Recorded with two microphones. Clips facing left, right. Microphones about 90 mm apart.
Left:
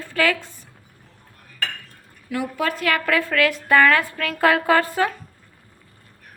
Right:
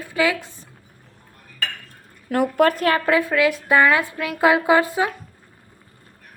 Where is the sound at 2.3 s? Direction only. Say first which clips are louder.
Right 7 dB; 50° right (ahead or behind).